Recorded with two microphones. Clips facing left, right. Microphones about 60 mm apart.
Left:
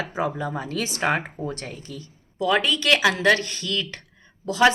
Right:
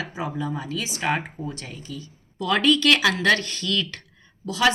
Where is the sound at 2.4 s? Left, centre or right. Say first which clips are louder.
Right 2 dB; centre.